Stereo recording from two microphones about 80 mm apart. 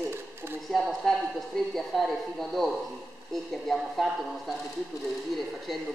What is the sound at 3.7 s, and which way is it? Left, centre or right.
Speech, centre.